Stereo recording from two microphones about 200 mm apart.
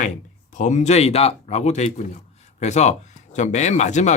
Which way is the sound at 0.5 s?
35° left (ahead or behind).